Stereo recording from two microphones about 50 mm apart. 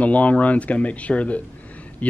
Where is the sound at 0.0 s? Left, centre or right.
Left.